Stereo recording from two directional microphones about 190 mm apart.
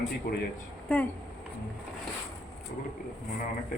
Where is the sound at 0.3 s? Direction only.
50° left (ahead or behind).